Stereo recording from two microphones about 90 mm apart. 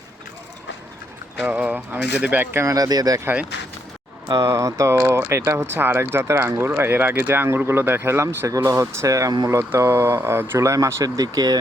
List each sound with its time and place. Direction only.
1.4 s speech: 15° right (ahead or behind)
2.7 s speech: 45° right (ahead or behind)
4.3 s speech: 40° right (ahead or behind)